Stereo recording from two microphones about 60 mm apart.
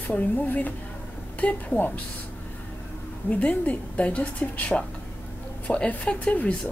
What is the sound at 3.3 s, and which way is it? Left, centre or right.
A woman's voice, left.